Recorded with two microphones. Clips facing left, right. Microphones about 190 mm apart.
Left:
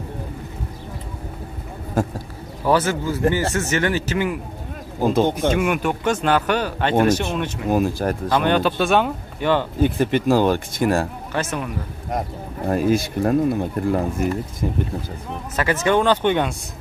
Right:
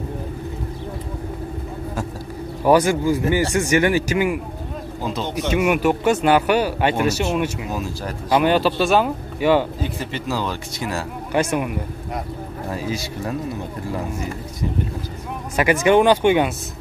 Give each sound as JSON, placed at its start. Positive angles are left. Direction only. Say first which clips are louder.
{"t": 2.6, "sound": "speech", "louder": "right 4 dB", "side_deg": -15}
{"t": 5.0, "sound": "speech", "louder": "left 8 dB", "side_deg": 50}
{"t": 5.5, "sound": "speech", "louder": "right 2 dB", "side_deg": -5}
{"t": 7.7, "sound": "speech", "louder": "left 7 dB", "side_deg": 55}
{"t": 8.3, "sound": "speech", "louder": "right 3 dB", "side_deg": -5}
{"t": 9.8, "sound": "speech", "louder": "left 8 dB", "side_deg": 55}
{"t": 11.3, "sound": "speech", "louder": "right 5 dB", "side_deg": -10}
{"t": 12.6, "sound": "speech", "louder": "left 9 dB", "side_deg": 55}
{"t": 15.5, "sound": "speech", "louder": "right 4 dB", "side_deg": -15}